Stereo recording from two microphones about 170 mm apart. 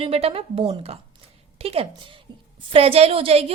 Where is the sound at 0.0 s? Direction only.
35° right (ahead or behind).